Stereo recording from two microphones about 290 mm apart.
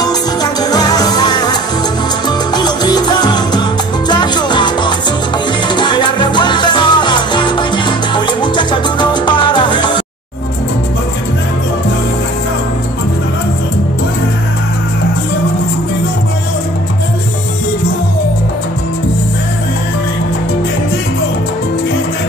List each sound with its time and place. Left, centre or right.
0.0 s music: centre
2.2 s salsa music: centre
4.1 s music: centre
5.8 s salsa music: centre